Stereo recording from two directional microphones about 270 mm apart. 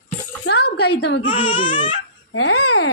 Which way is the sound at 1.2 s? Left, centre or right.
Centre.